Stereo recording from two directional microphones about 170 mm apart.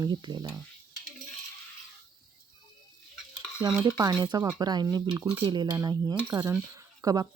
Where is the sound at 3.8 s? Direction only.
20° right (ahead or behind).